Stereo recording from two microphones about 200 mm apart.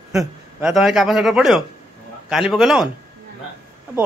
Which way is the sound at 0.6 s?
Centre (ahead or behind).